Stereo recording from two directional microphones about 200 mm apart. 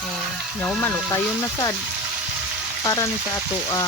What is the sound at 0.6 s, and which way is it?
Speech, 10° left (ahead or behind).